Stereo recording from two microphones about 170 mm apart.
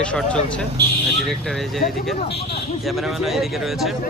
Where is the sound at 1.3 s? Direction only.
Centre (ahead or behind).